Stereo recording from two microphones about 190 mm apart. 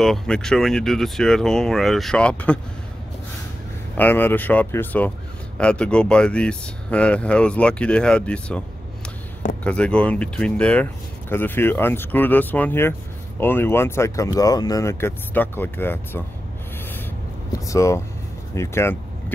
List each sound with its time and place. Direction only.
0.0 s speech: centre (ahead or behind)
3.9 s speech: 10° left (ahead or behind)
17.6 s speech: 15° left (ahead or behind)